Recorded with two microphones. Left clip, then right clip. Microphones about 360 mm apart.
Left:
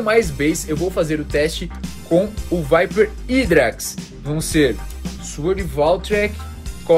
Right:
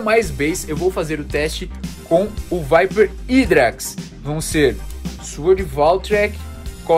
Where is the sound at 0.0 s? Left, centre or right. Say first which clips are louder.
Even; right.